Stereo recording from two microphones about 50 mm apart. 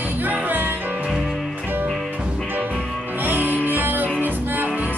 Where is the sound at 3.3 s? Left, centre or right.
Right.